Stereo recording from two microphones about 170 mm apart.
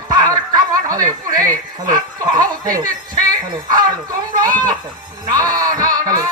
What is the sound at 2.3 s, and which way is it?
Snicker, 20° right (ahead or behind).